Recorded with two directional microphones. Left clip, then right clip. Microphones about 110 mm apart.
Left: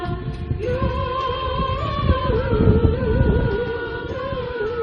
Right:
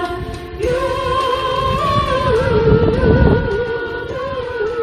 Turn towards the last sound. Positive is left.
turn(degrees=-35)  # may be behind; listen again after turning